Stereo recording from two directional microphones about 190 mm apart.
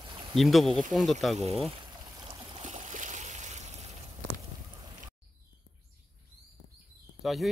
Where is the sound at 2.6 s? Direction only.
40° right (ahead or behind).